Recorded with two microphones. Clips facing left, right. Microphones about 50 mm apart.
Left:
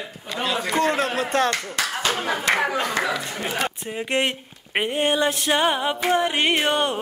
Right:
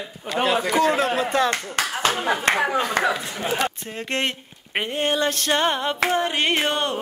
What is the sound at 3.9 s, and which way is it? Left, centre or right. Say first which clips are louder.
Music: left 2 dB; centre.